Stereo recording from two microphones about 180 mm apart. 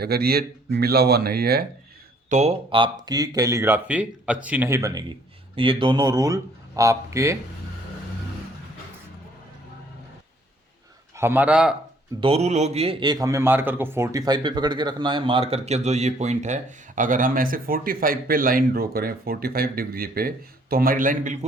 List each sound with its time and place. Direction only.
0.0 s speech: 60° right (ahead or behind)
2.3 s speech: 35° right (ahead or behind); by 7.3 s 15° right (ahead or behind)
11.2 s a man's voice: 10° right (ahead or behind)
12.2 s a man's voice: 35° right (ahead or behind)